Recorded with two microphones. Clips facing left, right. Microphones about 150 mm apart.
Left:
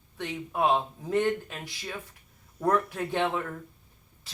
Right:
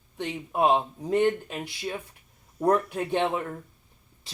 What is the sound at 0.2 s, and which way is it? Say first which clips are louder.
Speech: right 3 dB; 20° right (ahead or behind).